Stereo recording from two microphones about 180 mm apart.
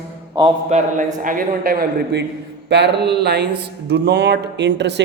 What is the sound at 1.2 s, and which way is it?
Speech, 50° right (ahead or behind).